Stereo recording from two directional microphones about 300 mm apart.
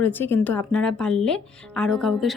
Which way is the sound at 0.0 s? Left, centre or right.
Centre.